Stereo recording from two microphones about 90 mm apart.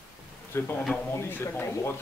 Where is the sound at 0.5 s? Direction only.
25° left (ahead or behind).